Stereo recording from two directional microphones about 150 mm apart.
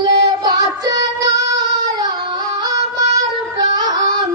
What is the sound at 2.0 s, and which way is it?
Music, 25° right (ahead or behind).